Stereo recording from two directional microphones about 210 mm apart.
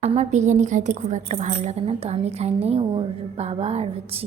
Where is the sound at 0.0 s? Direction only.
30° right (ahead or behind).